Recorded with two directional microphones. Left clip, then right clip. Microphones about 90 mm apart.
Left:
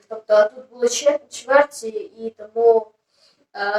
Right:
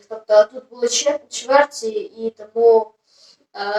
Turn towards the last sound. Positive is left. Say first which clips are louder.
# left 1 dB
turn(degrees=-25)  # may be behind; listen again after turning